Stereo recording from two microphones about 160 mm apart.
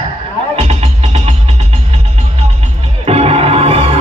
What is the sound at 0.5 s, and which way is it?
Music, 40° right (ahead or behind).